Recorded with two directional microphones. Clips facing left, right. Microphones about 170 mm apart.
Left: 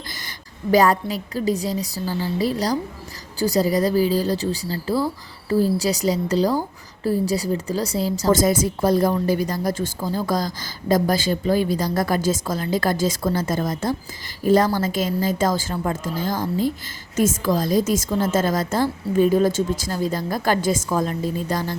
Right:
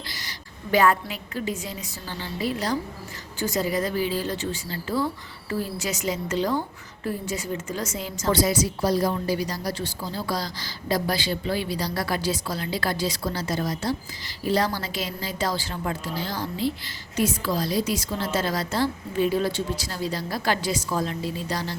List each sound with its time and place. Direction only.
0.1 s a woman's voice: 50° left (ahead or behind)